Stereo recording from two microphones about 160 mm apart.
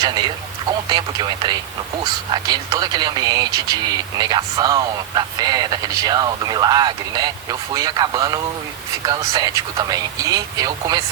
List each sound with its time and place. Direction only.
0.0 s speech: 25° right (ahead or behind)